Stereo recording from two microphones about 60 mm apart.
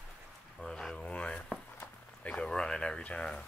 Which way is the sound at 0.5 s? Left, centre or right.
Centre.